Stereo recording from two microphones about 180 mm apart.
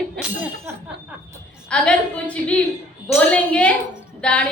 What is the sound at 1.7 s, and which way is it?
A woman's voice, 5° left (ahead or behind).